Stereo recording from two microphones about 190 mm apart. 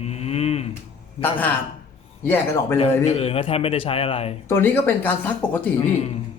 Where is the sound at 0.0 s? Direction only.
35° left (ahead or behind).